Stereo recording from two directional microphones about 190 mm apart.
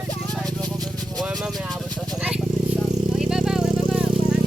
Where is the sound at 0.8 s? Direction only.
Centre (ahead or behind).